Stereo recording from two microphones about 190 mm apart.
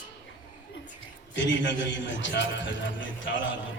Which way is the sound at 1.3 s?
75° left (ahead or behind).